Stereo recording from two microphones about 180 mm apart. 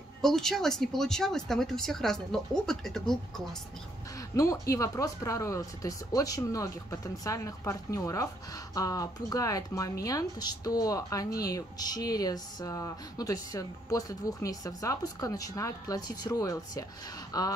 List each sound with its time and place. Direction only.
0.2 s speech: centre (ahead or behind)
4.4 s speech: 15° left (ahead or behind)